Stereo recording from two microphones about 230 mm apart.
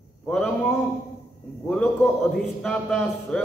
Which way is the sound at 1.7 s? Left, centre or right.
Centre.